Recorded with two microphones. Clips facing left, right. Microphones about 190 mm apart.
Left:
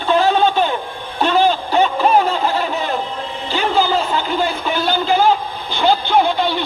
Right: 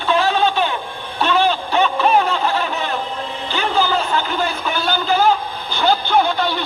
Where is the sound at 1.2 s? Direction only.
40° left (ahead or behind).